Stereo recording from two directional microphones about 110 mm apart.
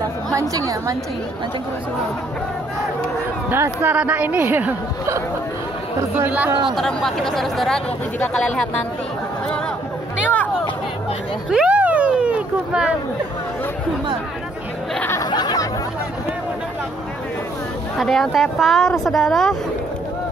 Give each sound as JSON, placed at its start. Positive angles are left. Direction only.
{"t": 0.3, "sound": "a woman's voice", "side_deg": -30}
{"t": 3.4, "sound": "a woman's voice", "side_deg": -20}
{"t": 6.1, "sound": "a woman's voice", "side_deg": -15}
{"t": 6.7, "sound": "speech", "side_deg": 5}
{"t": 11.5, "sound": "vehicle", "side_deg": -10}
{"t": 15.2, "sound": "a sound", "side_deg": 40}
{"t": 17.9, "sound": "speech", "side_deg": 5}